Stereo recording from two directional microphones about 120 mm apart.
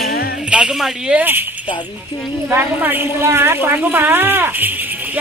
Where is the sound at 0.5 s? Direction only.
5° right (ahead or behind).